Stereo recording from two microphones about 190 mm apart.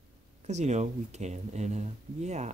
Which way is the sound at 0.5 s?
35° right (ahead or behind).